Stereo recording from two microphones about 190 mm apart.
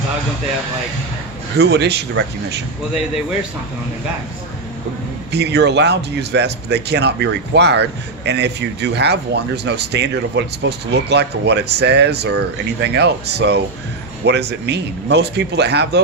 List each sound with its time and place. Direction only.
1.5 s speech: 60° right (ahead or behind)
5.3 s speech: 65° right (ahead or behind)